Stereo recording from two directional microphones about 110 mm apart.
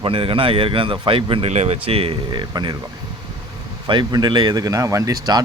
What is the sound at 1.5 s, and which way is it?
Speech, 85° right.